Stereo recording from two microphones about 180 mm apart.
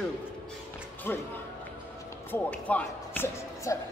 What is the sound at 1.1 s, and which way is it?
Speech, 10° left (ahead or behind).